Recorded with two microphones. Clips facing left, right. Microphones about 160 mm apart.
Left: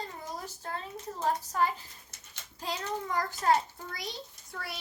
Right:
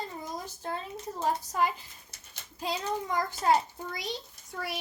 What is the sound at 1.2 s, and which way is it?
A child's voice, 15° right (ahead or behind).